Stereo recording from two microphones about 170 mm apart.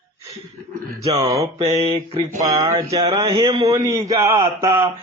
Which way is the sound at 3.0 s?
30° right (ahead or behind).